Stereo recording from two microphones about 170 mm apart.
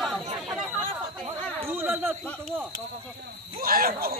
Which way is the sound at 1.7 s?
10° right (ahead or behind).